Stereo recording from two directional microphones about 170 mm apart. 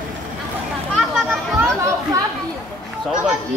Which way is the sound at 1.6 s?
15° right (ahead or behind).